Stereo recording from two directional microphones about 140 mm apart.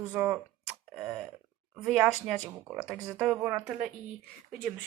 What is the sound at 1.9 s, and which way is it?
A woman's voice, 5° right (ahead or behind).